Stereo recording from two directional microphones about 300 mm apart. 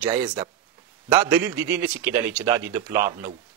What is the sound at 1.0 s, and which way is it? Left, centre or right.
A man's voice, centre.